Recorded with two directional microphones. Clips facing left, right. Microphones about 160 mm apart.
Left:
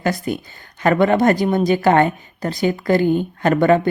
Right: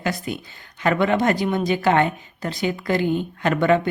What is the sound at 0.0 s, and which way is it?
Speech, 45° left (ahead or behind).